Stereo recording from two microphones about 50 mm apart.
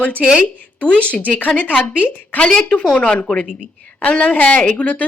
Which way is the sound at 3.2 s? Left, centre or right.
Left.